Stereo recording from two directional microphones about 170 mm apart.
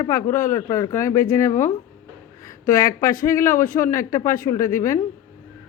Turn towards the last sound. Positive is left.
turn(degrees=15)  # may be behind; listen again after turning